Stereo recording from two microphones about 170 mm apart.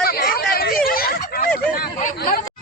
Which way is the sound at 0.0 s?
65° left (ahead or behind).